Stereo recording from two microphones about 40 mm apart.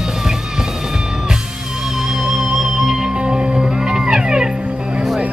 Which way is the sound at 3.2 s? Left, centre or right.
Right.